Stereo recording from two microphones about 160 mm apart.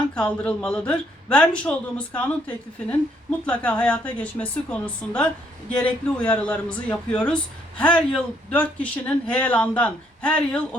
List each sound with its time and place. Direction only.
0.1 s a woman's voice: 5° left (ahead or behind)